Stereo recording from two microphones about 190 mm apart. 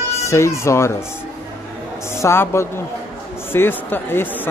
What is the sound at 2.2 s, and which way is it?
Speech, 15° left (ahead or behind).